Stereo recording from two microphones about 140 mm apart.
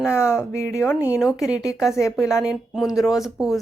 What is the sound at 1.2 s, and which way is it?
A woman's voice, 5° right (ahead or behind).